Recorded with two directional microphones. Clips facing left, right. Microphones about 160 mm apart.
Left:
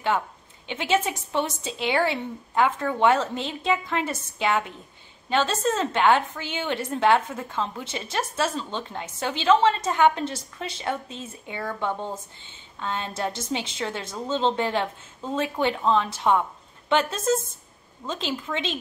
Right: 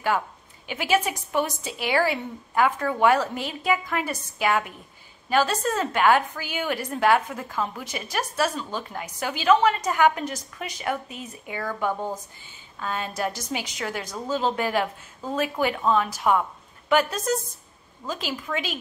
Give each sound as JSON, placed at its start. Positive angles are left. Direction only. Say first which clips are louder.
{"t": 0.7, "sound": "a woman's voice", "louder": "even", "side_deg": 25}
{"t": 15.9, "sound": "a woman's voice", "louder": "even", "side_deg": 25}